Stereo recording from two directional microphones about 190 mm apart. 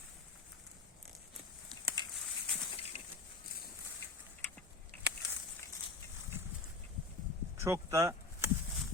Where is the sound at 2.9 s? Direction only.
35° left (ahead or behind).